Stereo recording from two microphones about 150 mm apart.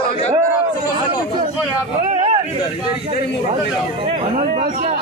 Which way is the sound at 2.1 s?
50° right (ahead or behind).